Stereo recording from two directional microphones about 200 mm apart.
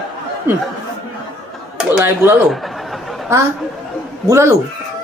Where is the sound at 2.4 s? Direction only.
Centre (ahead or behind).